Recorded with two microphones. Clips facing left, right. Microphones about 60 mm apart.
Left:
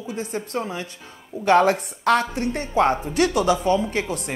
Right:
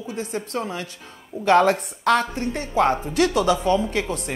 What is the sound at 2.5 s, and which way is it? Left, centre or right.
Speech, left.